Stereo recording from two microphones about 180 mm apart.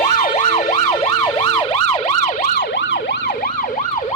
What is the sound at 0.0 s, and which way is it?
Emergency vehicle, 45° left (ahead or behind).